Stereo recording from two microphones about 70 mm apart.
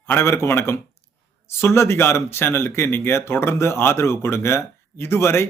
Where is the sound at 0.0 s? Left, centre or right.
Left.